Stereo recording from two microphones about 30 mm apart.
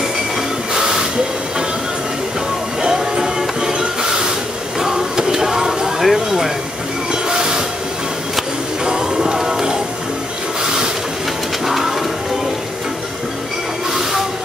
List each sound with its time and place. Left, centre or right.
0.7 s train: right
2.8 s music: right
3.7 s a sound: right
7.1 s train: right
8.8 s music: right
11.6 s music: centre